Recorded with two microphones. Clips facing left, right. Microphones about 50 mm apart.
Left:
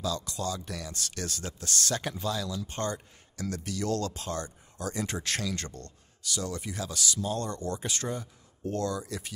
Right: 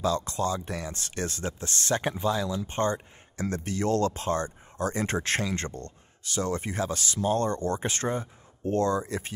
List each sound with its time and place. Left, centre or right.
0.0 s speech: right